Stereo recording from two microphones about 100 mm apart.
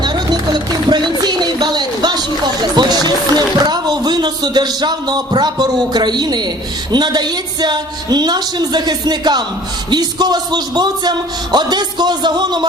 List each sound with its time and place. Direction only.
0.0 s music: 45° right (ahead or behind)
6.9 s a man's voice: 45° right (ahead or behind)